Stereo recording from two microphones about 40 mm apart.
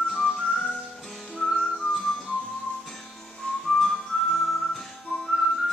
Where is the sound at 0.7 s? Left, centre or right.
Centre.